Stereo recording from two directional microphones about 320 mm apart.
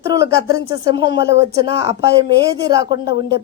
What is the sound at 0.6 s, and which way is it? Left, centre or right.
A woman's voice, centre.